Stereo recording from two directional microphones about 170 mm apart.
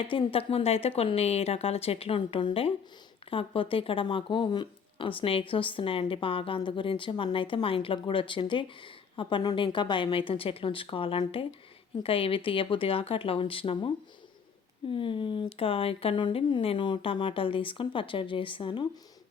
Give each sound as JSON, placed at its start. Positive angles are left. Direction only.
{"t": 0.0, "sound": "speech", "side_deg": 30}
{"t": 14.9, "sound": "speech", "side_deg": 30}